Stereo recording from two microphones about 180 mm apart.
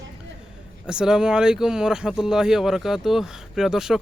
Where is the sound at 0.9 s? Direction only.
5° right (ahead or behind).